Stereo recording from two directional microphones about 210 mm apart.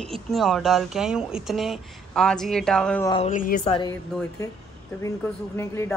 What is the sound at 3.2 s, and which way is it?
Speech, 40° left (ahead or behind).